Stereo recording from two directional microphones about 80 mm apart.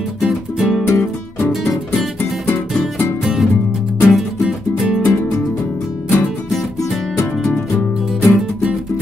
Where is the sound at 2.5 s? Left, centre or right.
Left.